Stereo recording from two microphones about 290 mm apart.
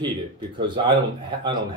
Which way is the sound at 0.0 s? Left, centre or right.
Centre.